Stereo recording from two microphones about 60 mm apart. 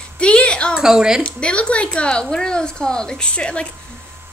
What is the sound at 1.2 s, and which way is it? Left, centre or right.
A woman's voice, centre.